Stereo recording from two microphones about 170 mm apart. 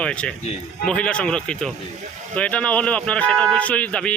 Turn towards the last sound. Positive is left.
turn(degrees=5)  # may be behind; listen again after turning